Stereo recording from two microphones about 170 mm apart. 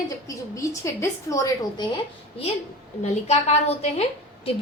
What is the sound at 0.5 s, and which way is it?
A woman's voice, 20° left (ahead or behind).